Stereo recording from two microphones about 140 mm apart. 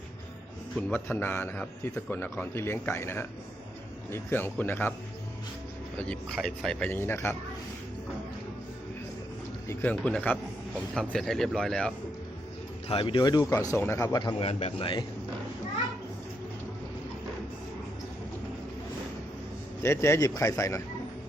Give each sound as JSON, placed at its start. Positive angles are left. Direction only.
{"t": 0.8, "sound": "a man's voice", "side_deg": 10}
{"t": 6.0, "sound": "a man's voice", "side_deg": 5}
{"t": 9.6, "sound": "a man's voice", "side_deg": 10}
{"t": 12.9, "sound": "speech", "side_deg": 40}
{"t": 14.4, "sound": "a man's voice", "side_deg": 40}
{"t": 19.8, "sound": "speech", "side_deg": 20}